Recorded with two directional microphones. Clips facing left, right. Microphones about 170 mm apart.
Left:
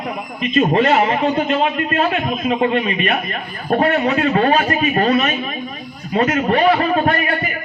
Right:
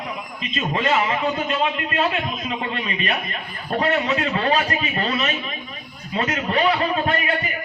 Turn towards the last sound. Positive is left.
turn(degrees=55)  # may be behind; listen again after turning